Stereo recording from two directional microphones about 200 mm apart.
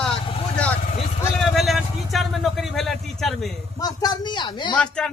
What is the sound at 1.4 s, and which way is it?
Vehicle, centre (ahead or behind).